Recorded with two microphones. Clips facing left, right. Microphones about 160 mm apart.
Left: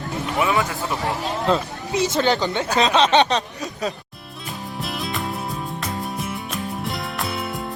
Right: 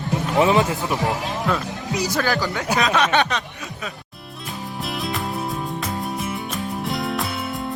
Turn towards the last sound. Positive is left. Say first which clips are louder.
# right 1 dB
turn(degrees=0)  # may be behind; listen again after turning